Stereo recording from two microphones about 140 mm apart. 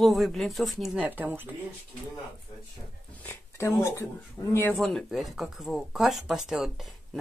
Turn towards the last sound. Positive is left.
turn(degrees=0)  # may be behind; listen again after turning